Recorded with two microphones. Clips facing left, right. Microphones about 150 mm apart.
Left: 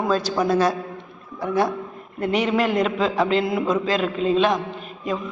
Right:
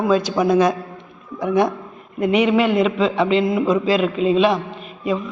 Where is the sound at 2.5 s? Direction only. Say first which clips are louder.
Right 4 dB; centre (ahead or behind).